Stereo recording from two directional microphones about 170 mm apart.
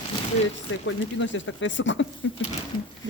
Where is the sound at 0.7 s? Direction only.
90° left.